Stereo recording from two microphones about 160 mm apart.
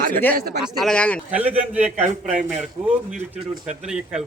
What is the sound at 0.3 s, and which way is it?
Speech, 75° right (ahead or behind).